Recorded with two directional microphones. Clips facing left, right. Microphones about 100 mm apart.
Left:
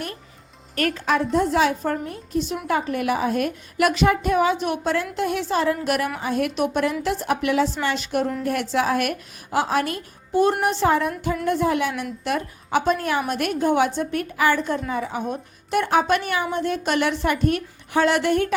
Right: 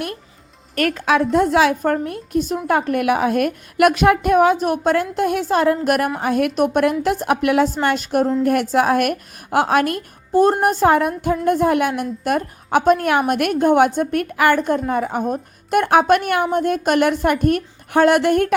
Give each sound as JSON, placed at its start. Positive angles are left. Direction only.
{"t": 0.9, "sound": "a woman's voice", "side_deg": -65}